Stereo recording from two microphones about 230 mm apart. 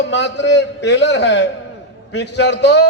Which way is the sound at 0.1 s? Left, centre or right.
Left.